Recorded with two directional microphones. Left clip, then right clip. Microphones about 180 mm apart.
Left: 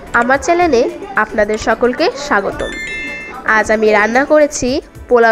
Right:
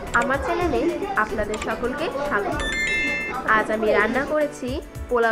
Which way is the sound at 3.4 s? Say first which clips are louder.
Left 9 dB; 40° left (ahead or behind).